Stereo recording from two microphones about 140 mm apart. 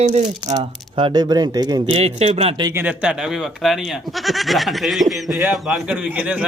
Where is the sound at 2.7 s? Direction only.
15° right (ahead or behind).